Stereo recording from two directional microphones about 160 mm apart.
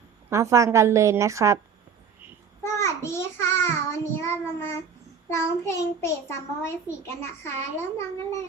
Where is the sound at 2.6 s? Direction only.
15° left (ahead or behind).